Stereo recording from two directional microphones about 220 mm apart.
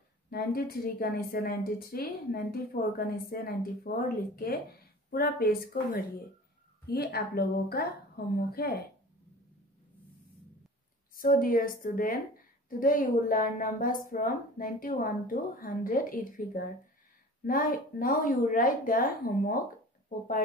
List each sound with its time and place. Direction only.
0.3 s a woman's voice: 45° left (ahead or behind)
11.1 s speech: 40° left (ahead or behind)